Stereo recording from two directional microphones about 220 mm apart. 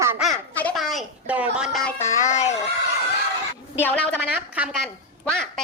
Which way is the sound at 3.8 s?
5° left (ahead or behind).